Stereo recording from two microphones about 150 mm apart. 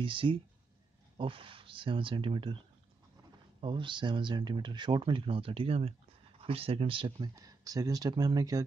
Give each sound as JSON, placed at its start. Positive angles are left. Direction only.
{"t": 0.0, "sound": "speech", "side_deg": -35}
{"t": 3.6, "sound": "speech", "side_deg": -35}